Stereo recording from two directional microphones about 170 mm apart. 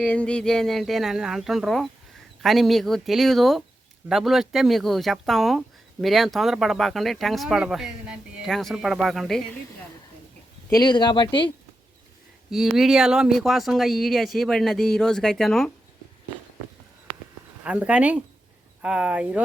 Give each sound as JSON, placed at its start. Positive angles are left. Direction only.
{"t": 0.0, "sound": "speech", "side_deg": 5}
{"t": 10.7, "sound": "speech", "side_deg": 25}
{"t": 12.5, "sound": "speech", "side_deg": 0}
{"t": 17.6, "sound": "speech", "side_deg": -5}